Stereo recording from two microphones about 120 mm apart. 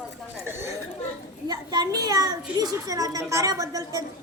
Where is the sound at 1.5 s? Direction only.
35° right (ahead or behind).